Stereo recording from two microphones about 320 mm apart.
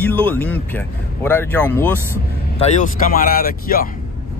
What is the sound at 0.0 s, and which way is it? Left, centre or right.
Speech, centre.